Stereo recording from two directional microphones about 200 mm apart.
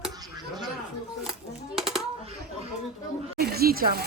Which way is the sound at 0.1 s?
20° right (ahead or behind).